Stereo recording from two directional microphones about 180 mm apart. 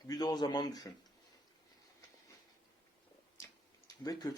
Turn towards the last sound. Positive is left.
turn(degrees=20)  # may be behind; listen again after turning